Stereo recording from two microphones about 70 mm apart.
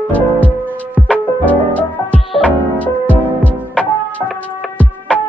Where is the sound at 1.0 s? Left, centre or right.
Centre.